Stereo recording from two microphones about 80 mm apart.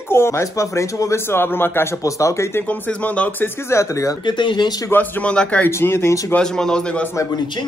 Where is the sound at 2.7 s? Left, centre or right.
Centre.